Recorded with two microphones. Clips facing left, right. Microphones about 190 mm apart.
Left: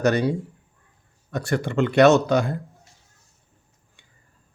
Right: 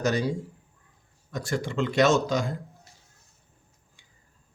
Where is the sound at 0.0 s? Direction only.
60° left (ahead or behind).